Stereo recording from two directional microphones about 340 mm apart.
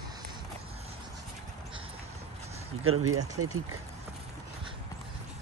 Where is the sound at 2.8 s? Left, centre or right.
Right.